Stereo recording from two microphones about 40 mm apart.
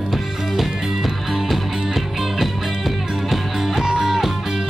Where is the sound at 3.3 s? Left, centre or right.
Centre.